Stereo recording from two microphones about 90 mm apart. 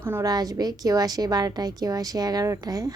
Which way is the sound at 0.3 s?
45° right (ahead or behind).